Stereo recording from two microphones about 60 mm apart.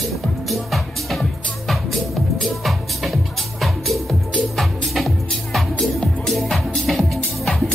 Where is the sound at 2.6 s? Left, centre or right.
Centre.